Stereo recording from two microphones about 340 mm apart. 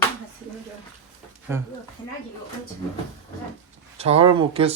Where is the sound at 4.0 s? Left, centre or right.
Centre.